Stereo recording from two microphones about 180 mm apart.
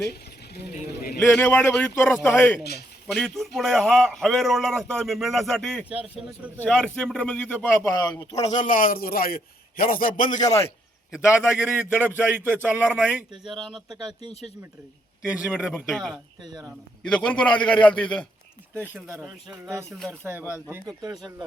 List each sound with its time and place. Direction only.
0.1 s speech: 65° left (ahead or behind)
1.2 s a man's voice: 10° left (ahead or behind)
8.4 s a man's voice: 45° left (ahead or behind)
11.6 s a man's voice: 10° right (ahead or behind)
14.1 s speech: 25° right (ahead or behind)
15.2 s a man's voice: 10° right (ahead or behind)
16.4 s speech: 25° right (ahead or behind)
16.6 s a man's voice: 5° left (ahead or behind)
20.1 s speech: 10° right (ahead or behind)